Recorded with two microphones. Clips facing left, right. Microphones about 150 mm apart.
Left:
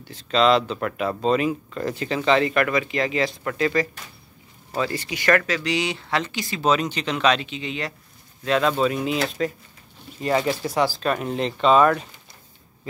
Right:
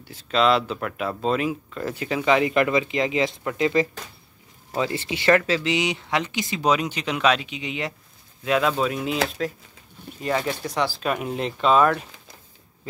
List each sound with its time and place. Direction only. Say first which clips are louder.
0.0 s speech: left 1 dB; 10° right (ahead or behind)
8.5 s speech: left 1 dB; 5° right (ahead or behind)